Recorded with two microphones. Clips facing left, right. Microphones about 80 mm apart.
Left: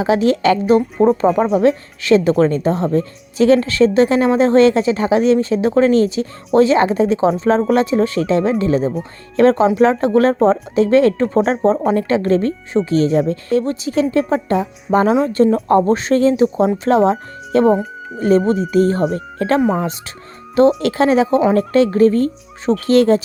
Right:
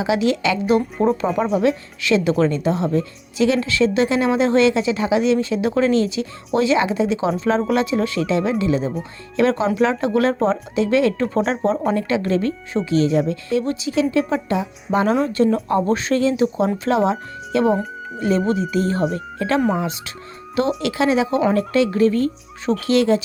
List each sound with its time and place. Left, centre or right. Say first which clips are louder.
0.0 s speech: left 5 dB; left
17.7 s speech: left 4 dB; centre
18.2 s speech: left 5 dB; left